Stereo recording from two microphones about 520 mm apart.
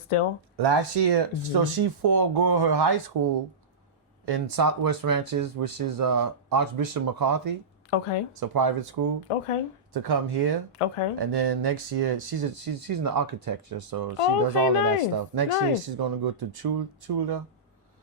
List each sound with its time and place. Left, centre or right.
0.1 s speech: left
0.5 s speech: right
4.3 s speech: right
7.9 s speech: left
8.4 s speech: right
9.3 s speech: left
9.9 s speech: right
10.8 s speech: left
11.3 s speech: right